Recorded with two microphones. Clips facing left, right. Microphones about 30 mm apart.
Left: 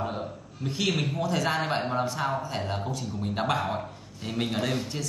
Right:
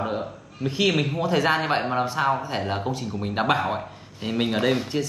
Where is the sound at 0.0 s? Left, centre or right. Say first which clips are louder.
Right 4 dB; right.